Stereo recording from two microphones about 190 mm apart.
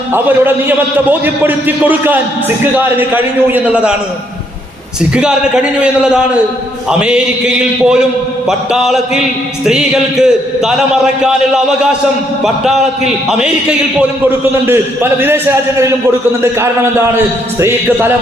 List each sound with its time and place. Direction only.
0.1 s a man's voice: 10° right (ahead or behind)
5.1 s a man's voice: 5° right (ahead or behind)
14.3 s a man's voice: 10° right (ahead or behind)
17.6 s a man's voice: 10° right (ahead or behind)